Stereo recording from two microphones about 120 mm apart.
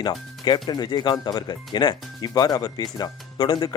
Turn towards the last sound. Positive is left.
turn(degrees=40)  # may be behind; listen again after turning